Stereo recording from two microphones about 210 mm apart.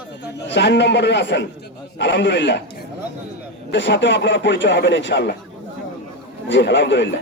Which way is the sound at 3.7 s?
60° left (ahead or behind).